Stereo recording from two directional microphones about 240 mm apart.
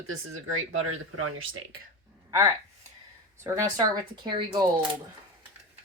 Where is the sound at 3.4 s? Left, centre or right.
Centre.